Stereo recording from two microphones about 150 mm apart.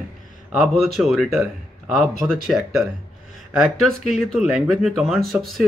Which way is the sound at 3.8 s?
Centre (ahead or behind).